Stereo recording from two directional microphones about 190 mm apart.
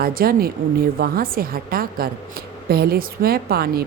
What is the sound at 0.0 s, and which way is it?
A woman's voice, 50° right (ahead or behind).